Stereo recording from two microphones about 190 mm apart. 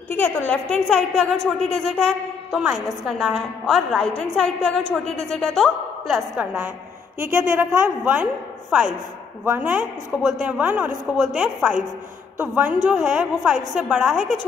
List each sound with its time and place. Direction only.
0.1 s a woman's voice: 10° left (ahead or behind); by 6.7 s 10° right (ahead or behind)
7.2 s a woman's voice: 45° right (ahead or behind)
7.5 s a woman's voice: 5° right (ahead or behind)